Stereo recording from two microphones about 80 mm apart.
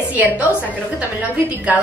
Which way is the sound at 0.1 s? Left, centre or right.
Right.